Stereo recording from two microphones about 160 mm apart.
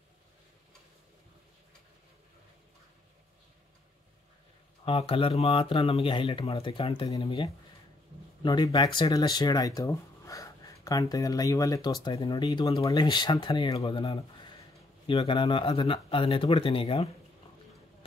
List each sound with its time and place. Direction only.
4.8 s speech: 35° left (ahead or behind)
8.4 s speech: 25° left (ahead or behind)